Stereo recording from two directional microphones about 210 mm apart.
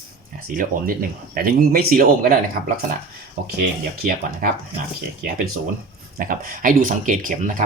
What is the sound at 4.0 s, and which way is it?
Speech, 45° right (ahead or behind).